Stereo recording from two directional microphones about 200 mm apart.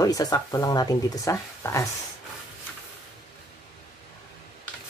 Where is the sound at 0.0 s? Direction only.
20° left (ahead or behind).